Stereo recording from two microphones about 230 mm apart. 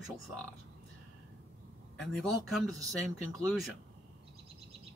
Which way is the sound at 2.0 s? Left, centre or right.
Centre.